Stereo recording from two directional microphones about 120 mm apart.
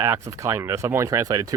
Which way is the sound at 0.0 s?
25° right (ahead or behind).